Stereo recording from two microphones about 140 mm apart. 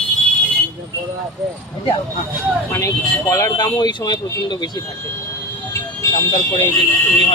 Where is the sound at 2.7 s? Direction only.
20° left (ahead or behind).